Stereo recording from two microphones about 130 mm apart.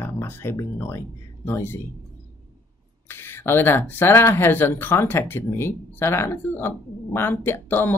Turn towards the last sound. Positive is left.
turn(degrees=15)  # may be behind; listen again after turning